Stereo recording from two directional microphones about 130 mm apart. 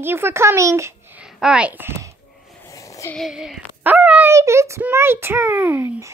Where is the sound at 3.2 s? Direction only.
Centre (ahead or behind); by 6.1 s 20° right (ahead or behind).